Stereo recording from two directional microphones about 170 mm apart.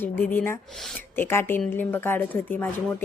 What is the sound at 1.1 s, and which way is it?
A woman's voice, 15° left (ahead or behind).